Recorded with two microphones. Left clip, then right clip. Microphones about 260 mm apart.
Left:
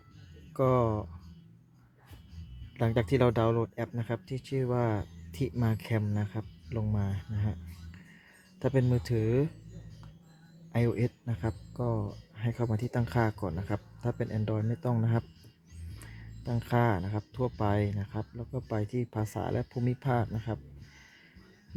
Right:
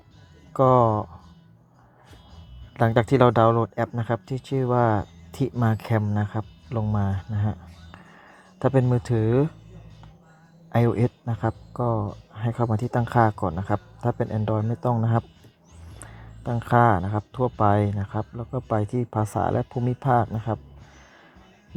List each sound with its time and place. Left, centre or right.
0.5 s speech: centre
2.7 s speech: centre
10.7 s speech: centre
16.4 s speech: centre